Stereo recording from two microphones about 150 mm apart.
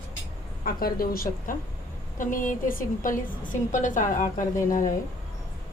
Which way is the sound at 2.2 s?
60° left (ahead or behind).